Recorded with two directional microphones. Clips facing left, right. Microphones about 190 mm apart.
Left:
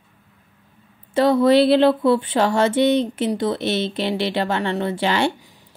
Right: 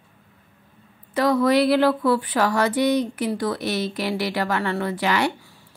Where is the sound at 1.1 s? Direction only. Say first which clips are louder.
Left 4 dB; 25° left (ahead or behind).